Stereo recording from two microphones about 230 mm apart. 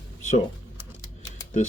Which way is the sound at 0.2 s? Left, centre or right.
Left.